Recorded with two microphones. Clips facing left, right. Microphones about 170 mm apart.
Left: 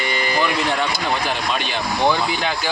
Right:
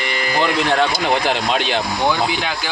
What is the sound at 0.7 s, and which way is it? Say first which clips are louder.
Speech: right 5 dB; 85° right.